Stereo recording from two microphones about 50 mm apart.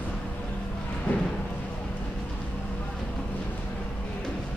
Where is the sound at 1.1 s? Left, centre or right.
Left.